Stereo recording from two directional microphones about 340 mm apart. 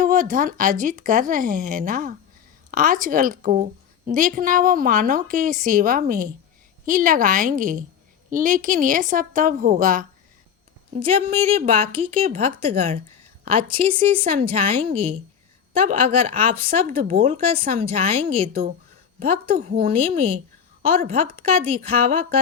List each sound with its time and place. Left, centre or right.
0.0 s a woman's voice: right